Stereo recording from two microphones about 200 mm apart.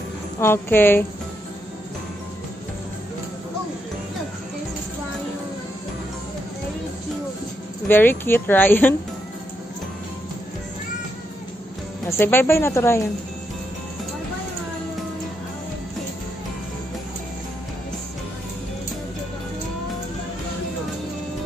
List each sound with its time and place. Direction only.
0.4 s speech: 10° left (ahead or behind)
7.9 s speech: 10° left (ahead or behind)
12.1 s speech: 10° left (ahead or behind)